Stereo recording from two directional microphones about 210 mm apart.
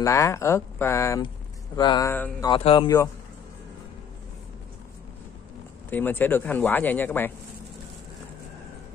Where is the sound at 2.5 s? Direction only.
25° left (ahead or behind).